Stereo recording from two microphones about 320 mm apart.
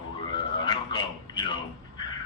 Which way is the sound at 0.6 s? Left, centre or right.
Centre.